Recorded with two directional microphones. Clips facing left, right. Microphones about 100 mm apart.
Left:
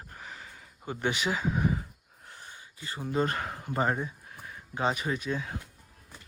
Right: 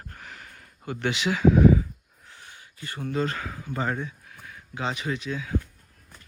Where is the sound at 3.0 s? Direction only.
15° left (ahead or behind).